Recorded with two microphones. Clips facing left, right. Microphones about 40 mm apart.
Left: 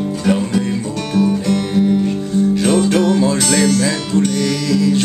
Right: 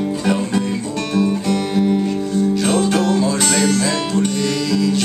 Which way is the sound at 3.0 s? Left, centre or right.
Centre.